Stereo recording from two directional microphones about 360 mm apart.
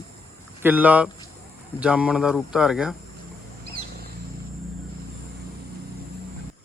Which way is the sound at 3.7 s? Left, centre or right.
Right.